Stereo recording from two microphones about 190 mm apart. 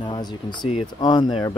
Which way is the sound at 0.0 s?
20° left (ahead or behind).